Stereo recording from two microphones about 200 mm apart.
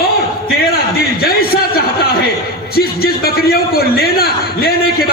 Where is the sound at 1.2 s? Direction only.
50° left (ahead or behind).